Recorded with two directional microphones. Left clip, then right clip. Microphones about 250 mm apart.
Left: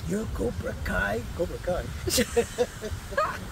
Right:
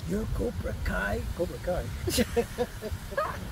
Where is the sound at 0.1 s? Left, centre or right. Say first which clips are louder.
Left 2 dB; centre.